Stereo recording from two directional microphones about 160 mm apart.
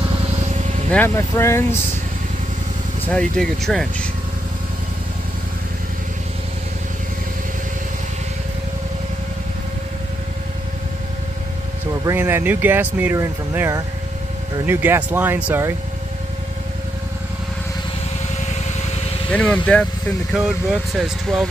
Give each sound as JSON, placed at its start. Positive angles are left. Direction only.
{"t": 0.6, "sound": "vehicle", "side_deg": -45}
{"t": 0.9, "sound": "speech", "side_deg": 15}
{"t": 3.1, "sound": "speech", "side_deg": 5}
{"t": 12.1, "sound": "speech", "side_deg": -15}
{"t": 19.3, "sound": "speech", "side_deg": 10}
{"t": 20.3, "sound": "speech", "side_deg": 0}